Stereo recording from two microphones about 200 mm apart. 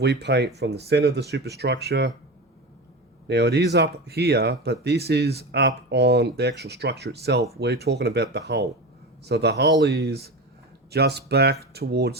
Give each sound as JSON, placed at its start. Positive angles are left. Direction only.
{"t": 0.0, "sound": "speech", "side_deg": -55}
{"t": 3.2, "sound": "speech", "side_deg": -55}